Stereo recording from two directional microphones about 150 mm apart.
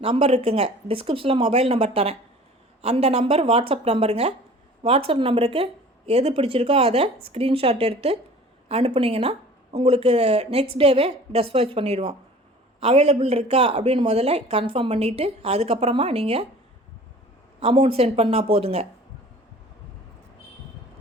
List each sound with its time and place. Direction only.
0.0 s speech: 40° right (ahead or behind)
17.6 s speech: 35° right (ahead or behind)